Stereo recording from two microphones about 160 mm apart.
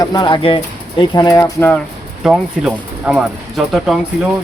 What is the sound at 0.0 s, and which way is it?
Speech, 25° left (ahead or behind).